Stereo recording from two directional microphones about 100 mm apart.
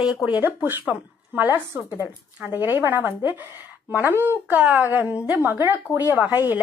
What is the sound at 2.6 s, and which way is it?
A woman's voice, 20° right (ahead or behind).